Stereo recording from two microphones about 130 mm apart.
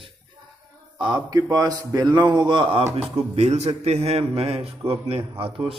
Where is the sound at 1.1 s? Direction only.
30° right (ahead or behind).